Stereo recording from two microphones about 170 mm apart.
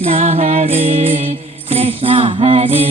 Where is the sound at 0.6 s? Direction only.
30° right (ahead or behind).